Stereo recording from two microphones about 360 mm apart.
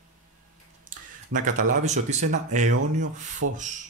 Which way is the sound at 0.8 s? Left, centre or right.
Right.